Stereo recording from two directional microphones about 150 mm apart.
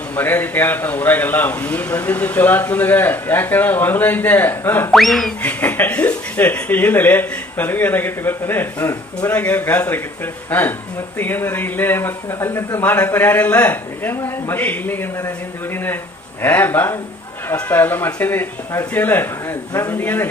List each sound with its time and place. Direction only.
0.2 s speech: 15° left (ahead or behind)
4.9 s speech: centre (ahead or behind)